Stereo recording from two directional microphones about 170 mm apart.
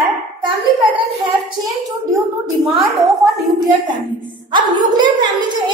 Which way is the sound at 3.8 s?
25° right (ahead or behind).